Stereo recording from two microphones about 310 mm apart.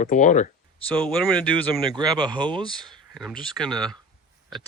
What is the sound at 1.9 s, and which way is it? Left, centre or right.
Speech, centre.